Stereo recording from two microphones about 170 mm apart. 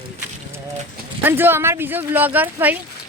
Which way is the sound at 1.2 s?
10° right (ahead or behind).